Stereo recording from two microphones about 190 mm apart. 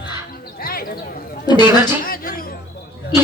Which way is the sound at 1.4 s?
20° left (ahead or behind).